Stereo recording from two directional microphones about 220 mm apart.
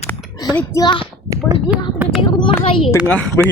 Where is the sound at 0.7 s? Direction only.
20° left (ahead or behind).